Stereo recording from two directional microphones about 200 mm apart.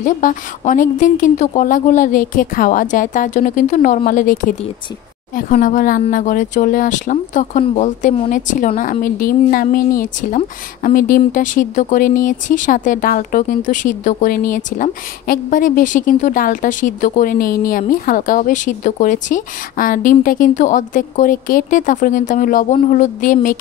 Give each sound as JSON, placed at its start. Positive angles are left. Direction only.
{"t": 0.0, "sound": "a woman's voice", "side_deg": 40}